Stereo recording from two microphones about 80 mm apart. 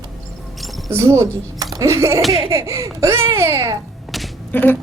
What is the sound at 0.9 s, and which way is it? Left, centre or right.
Speech, right.